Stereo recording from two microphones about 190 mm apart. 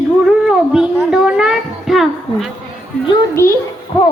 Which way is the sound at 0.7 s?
5° right (ahead or behind).